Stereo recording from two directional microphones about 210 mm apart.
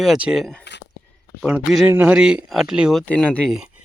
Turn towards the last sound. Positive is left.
turn(degrees=0)  # may be behind; listen again after turning